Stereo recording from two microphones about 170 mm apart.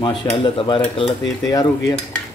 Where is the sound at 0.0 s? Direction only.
30° left (ahead or behind).